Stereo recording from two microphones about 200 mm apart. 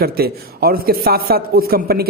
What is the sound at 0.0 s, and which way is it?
A man's voice, 50° right (ahead or behind).